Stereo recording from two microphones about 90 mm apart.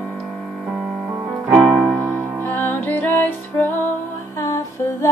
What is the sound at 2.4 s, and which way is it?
Music, 20° left (ahead or behind).